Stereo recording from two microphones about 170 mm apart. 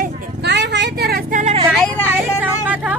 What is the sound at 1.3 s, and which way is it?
Vehicle, 45° right (ahead or behind).